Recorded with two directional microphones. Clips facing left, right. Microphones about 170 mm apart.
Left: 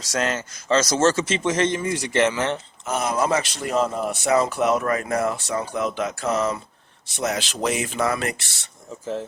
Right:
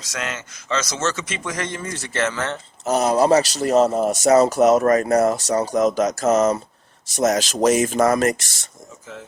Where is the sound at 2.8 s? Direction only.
40° right (ahead or behind).